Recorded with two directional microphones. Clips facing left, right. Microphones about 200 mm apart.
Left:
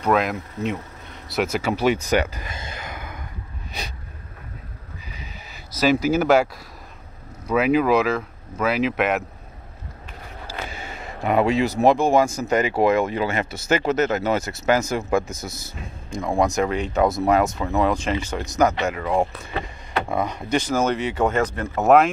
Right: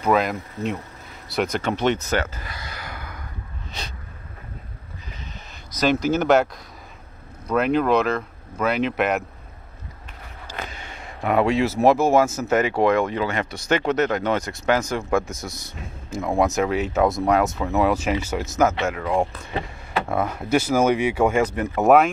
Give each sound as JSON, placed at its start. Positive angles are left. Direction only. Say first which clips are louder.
{"t": 0.0, "sound": "speech", "louder": "even", "side_deg": 0}
{"t": 5.0, "sound": "a sound", "louder": "right 1 dB", "side_deg": 5}
{"t": 7.4, "sound": "speech", "louder": "left 1 dB", "side_deg": 5}
{"t": 10.4, "sound": "speech", "louder": "left 1 dB", "side_deg": 5}